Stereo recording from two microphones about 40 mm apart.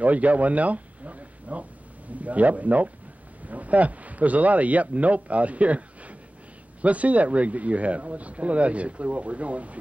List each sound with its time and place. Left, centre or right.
0.0 s speech: right